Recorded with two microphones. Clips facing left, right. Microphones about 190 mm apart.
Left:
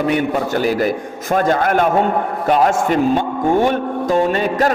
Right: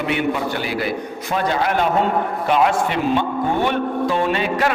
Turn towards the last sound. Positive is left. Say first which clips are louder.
# left 3 dB
turn(degrees=40)  # may be behind; listen again after turning